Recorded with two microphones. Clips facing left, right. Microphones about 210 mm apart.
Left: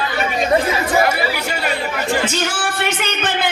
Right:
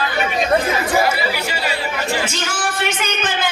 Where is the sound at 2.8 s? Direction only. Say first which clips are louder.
Left 1 dB; 65° left (ahead or behind).